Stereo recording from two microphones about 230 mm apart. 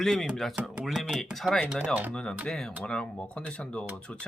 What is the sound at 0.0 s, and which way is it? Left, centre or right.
Speech, centre.